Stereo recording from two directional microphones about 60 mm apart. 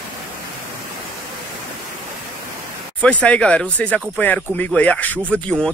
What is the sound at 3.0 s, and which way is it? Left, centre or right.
Speech, left.